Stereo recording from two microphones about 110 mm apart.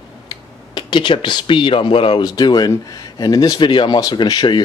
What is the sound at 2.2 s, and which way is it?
Speech, 35° left (ahead or behind).